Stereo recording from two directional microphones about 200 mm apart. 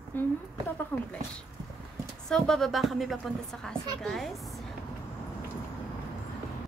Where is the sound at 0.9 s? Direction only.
5° left (ahead or behind).